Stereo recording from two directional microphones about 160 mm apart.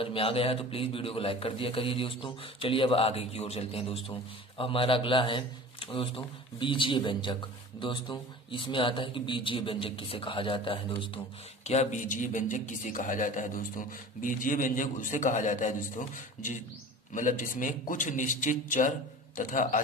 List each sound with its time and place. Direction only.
0.0 s speech: 35° left (ahead or behind)
11.6 s speech: 45° left (ahead or behind)
17.1 s speech: 55° left (ahead or behind)